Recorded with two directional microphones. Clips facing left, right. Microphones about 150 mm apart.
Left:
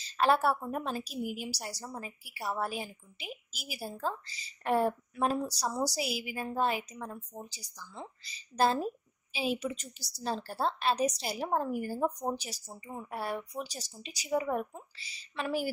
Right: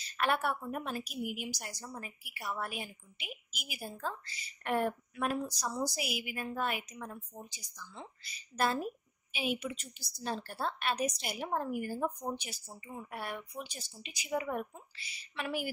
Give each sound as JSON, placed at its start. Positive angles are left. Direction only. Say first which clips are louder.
{"t": 0.0, "sound": "a woman's voice", "louder": "left 5 dB", "side_deg": 30}